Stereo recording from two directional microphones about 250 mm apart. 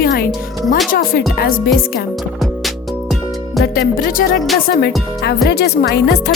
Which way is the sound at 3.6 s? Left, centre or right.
Left.